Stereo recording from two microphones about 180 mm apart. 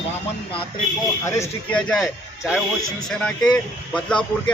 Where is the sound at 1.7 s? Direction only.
Centre (ahead or behind).